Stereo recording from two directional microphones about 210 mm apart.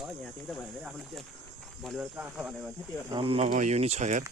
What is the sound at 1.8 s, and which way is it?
Cricket, 5° right (ahead or behind).